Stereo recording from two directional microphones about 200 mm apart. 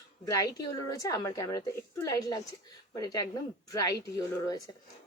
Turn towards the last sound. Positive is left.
turn(degrees=15)  # may be behind; listen again after turning